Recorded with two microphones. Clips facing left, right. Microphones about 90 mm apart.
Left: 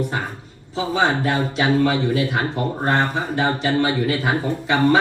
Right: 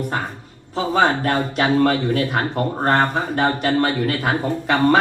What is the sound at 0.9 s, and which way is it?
Speech, 50° right (ahead or behind).